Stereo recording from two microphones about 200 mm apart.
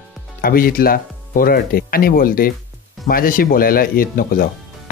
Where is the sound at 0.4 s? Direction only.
45° left (ahead or behind).